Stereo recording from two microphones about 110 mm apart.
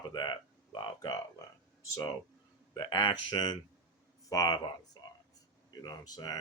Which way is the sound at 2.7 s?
45° left (ahead or behind).